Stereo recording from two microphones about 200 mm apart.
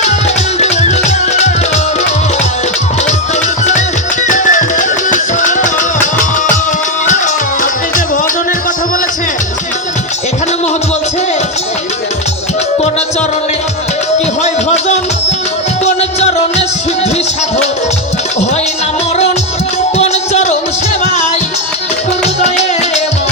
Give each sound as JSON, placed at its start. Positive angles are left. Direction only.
{"t": 0.6, "sound": "music", "side_deg": 35}
{"t": 4.3, "sound": "music", "side_deg": 40}
{"t": 14.4, "sound": "music", "side_deg": 35}
{"t": 20.0, "sound": "music", "side_deg": 35}
{"t": 22.4, "sound": "music", "side_deg": 35}